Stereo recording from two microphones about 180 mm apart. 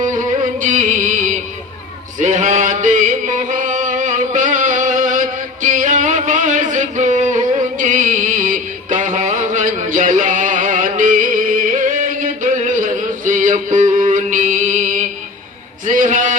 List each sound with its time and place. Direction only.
0.0 s music: 45° right (ahead or behind)
2.1 s a sound: 45° right (ahead or behind)
9.5 s music: 45° right (ahead or behind)
13.8 s music: 25° right (ahead or behind)
14.1 s mantra: 45° right (ahead or behind)
15.9 s a sound: 45° right (ahead or behind)